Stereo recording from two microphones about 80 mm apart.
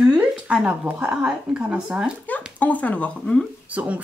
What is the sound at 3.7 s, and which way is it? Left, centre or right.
Speech, centre.